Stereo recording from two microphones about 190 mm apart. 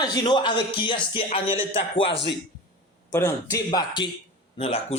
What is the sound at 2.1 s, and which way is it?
Speech, 65° left (ahead or behind).